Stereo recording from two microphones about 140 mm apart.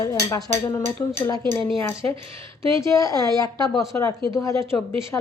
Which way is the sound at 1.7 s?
40° right (ahead or behind).